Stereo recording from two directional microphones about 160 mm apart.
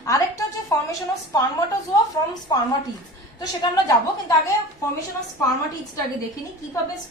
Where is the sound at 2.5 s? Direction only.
25° left (ahead or behind).